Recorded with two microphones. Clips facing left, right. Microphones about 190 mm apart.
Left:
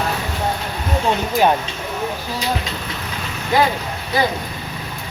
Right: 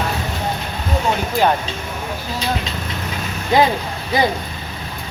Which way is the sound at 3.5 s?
20° right (ahead or behind).